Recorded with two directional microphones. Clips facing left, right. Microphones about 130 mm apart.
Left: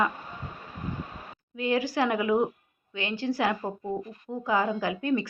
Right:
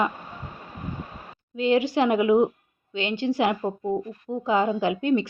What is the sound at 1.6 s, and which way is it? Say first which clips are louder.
A woman's voice: right 5 dB; 25° right (ahead or behind).